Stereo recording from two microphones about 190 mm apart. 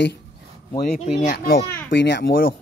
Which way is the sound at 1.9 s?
65° left (ahead or behind).